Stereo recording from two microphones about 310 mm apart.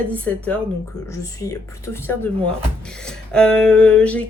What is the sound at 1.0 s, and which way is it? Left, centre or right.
Speech, centre.